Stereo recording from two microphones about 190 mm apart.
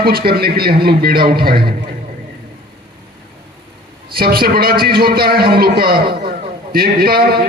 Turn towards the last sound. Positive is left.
turn(degrees=-55)  # may be behind; listen again after turning